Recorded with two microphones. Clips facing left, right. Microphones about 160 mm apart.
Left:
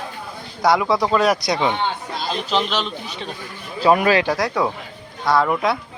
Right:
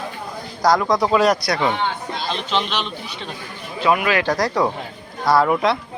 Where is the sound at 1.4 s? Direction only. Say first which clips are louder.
Left 1 dB; 20° left (ahead or behind).